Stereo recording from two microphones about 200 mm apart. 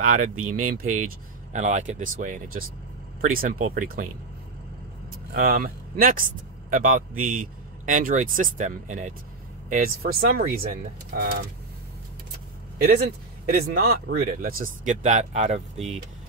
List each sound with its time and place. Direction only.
0.0 s a man's voice: 40° right (ahead or behind)
0.4 s speech: 90° right
0.7 s a man's voice: 40° right (ahead or behind)
5.3 s a man's voice: 45° right (ahead or behind)
12.8 s speech: 50° right (ahead or behind); by 16.0 s 35° right (ahead or behind)